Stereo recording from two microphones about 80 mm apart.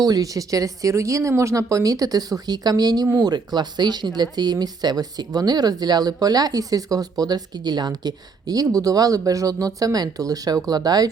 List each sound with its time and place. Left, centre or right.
0.0 s speech: right